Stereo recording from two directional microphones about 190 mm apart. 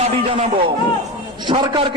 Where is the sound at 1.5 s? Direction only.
25° right (ahead or behind).